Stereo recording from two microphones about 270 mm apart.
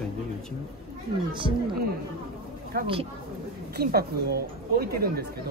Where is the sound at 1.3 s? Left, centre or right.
Centre.